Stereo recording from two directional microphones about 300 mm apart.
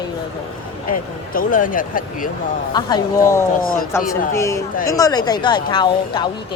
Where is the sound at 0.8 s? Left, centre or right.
Left.